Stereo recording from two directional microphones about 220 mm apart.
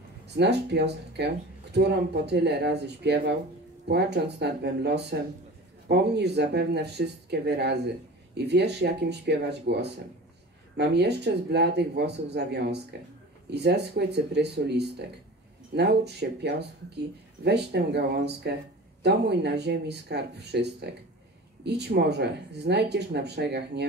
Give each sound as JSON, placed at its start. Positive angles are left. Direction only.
{"t": 0.4, "sound": "speech", "side_deg": -50}